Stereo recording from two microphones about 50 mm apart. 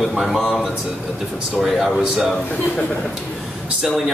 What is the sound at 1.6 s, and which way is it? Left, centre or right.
Speech, centre.